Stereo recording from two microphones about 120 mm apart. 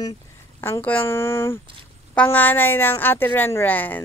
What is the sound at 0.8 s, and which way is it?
A woman's voice, 15° left (ahead or behind).